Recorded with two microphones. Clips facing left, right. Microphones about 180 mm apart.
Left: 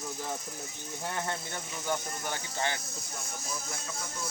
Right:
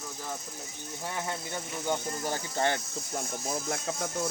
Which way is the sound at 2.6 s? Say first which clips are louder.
Right 6 dB; 50° right (ahead or behind).